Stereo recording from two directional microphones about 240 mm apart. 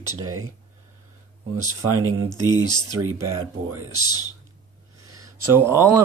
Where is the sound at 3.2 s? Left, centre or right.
Centre.